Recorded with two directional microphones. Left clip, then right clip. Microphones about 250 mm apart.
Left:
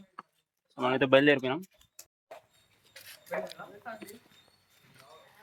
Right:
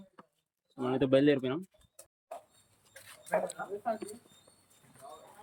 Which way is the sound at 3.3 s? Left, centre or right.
Right.